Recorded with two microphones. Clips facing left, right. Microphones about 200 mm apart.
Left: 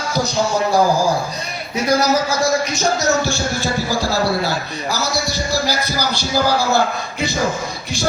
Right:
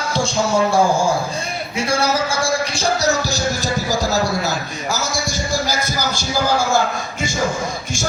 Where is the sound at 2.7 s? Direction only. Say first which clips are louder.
Left 1 dB; 35° right (ahead or behind).